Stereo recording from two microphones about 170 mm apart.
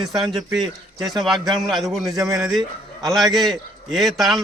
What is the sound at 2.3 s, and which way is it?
A man's voice, 5° right (ahead or behind).